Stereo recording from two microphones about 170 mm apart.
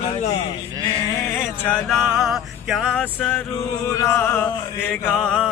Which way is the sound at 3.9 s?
15° left (ahead or behind).